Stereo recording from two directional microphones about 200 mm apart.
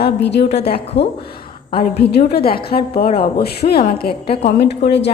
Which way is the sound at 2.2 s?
50° left (ahead or behind).